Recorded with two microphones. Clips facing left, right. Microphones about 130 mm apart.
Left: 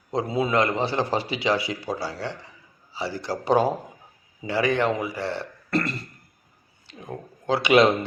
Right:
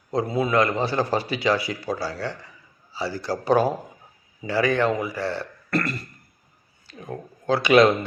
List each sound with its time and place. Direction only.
0.1 s a man's voice: 25° left (ahead or behind)